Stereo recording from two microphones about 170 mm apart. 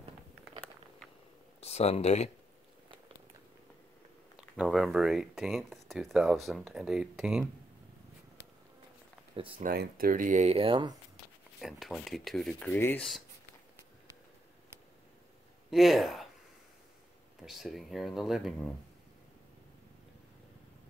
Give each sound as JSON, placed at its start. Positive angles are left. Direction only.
{"t": 1.6, "sound": "speech", "side_deg": 40}
{"t": 4.4, "sound": "speech", "side_deg": 0}
{"t": 9.6, "sound": "speech", "side_deg": -60}
{"t": 11.6, "sound": "speech", "side_deg": 0}
{"t": 15.7, "sound": "speech", "side_deg": 0}
{"t": 17.4, "sound": "speech", "side_deg": 0}